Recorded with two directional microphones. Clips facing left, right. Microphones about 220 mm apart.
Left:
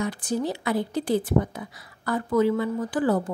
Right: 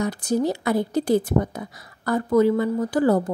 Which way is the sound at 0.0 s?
40° right (ahead or behind).